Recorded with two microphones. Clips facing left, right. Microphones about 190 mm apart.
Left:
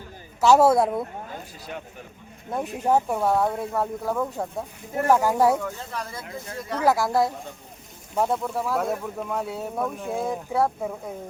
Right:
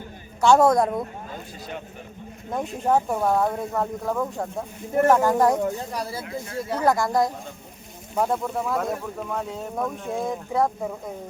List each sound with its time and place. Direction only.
0.4 s speech: 5° left (ahead or behind)
2.7 s speech: 5° left (ahead or behind)
6.0 s speech: 30° right (ahead or behind)
6.8 s speech: 5° left (ahead or behind)